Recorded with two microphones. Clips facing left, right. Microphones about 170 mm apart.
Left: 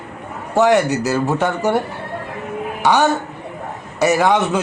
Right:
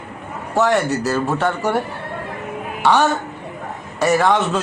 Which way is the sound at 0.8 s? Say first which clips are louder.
Left 1 dB; 90° left.